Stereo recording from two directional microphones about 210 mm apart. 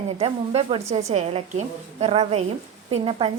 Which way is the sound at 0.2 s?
30° right (ahead or behind).